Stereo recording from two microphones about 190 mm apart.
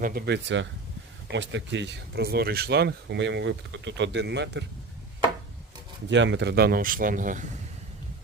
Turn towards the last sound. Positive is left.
turn(degrees=-45)  # may be behind; listen again after turning